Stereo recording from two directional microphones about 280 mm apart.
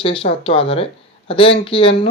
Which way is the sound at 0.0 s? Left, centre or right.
Centre.